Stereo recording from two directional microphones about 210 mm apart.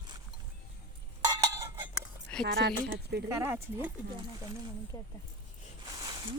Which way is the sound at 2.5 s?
50° right (ahead or behind).